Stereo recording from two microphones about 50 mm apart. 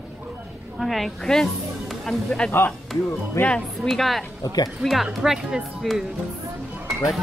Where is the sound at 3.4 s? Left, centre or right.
Left.